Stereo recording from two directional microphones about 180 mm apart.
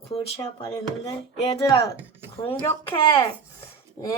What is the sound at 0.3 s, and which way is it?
A woman's voice, 20° left (ahead or behind).